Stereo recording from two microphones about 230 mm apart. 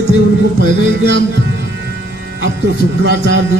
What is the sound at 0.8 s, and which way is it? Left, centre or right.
Speech, right.